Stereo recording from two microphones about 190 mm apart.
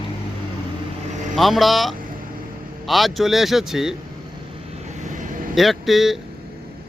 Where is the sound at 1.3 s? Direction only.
Centre (ahead or behind).